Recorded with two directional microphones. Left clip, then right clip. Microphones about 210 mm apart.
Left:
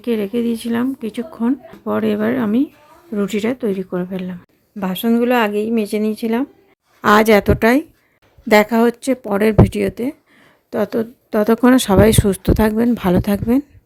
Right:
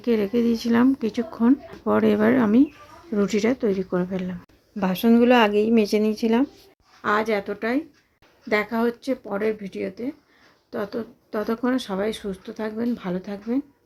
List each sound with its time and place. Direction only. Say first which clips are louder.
0.0 s speech: left 2 dB; 5° left (ahead or behind)
7.0 s a woman's voice: left 11 dB; 50° left (ahead or behind)